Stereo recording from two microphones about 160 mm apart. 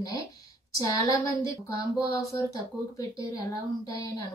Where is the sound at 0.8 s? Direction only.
20° left (ahead or behind).